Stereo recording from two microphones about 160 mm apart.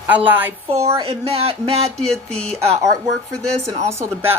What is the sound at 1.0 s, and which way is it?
Speech, 40° right (ahead or behind).